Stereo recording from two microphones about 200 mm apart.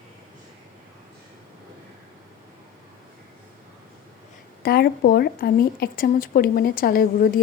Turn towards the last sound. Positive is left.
turn(degrees=45)  # may be behind; listen again after turning